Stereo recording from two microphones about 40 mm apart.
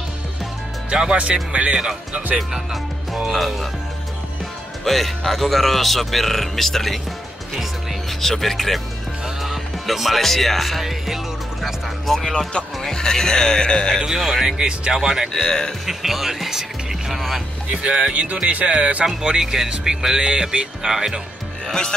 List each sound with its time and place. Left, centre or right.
0.8 s speech: centre
2.3 s speech: centre
4.8 s speech: centre
8.1 s speech: centre
12.1 s speech: centre
14.0 s speech: centre
15.3 s speech: centre
15.8 s speech: centre
17.6 s speech: right
19.2 s speech: centre
21.6 s speech: centre